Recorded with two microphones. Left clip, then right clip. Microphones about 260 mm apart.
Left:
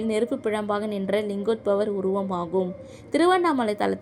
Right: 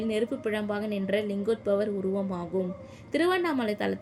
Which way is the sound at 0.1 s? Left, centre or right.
Centre.